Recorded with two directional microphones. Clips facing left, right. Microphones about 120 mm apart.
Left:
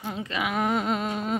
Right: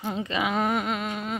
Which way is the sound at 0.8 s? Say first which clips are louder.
Left 2 dB; 35° left (ahead or behind).